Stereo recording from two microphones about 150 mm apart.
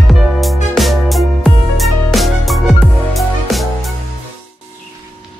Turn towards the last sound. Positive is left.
turn(degrees=0)  # may be behind; listen again after turning